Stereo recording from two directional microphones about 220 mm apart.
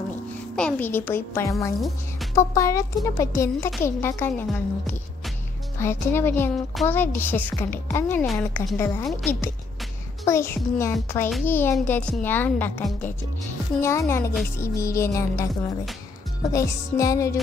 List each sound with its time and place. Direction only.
0.6 s a woman's voice: 5° left (ahead or behind)
5.8 s a woman's voice: 10° left (ahead or behind)